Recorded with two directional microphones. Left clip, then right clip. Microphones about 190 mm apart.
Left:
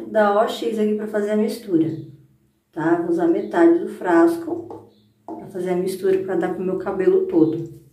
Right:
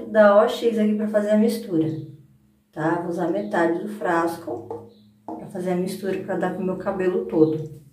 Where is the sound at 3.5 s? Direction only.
10° left (ahead or behind).